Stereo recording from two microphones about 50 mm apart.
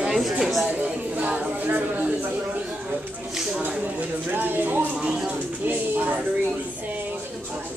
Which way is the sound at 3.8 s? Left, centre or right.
Right.